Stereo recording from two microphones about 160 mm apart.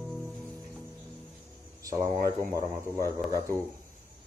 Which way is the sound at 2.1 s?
60° right (ahead or behind).